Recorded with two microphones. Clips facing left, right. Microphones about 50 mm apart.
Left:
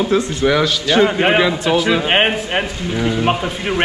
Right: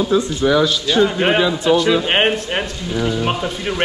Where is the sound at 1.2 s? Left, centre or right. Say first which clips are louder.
Left 1 dB; centre.